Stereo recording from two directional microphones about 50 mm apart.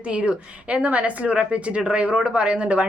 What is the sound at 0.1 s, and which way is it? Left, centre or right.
A woman's voice, right.